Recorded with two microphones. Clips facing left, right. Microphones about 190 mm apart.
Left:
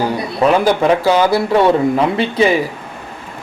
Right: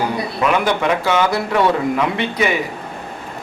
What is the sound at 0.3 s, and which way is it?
Speech, 35° left (ahead or behind).